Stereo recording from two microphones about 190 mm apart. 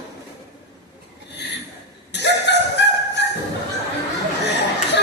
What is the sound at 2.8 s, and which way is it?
Fowl, 65° left (ahead or behind).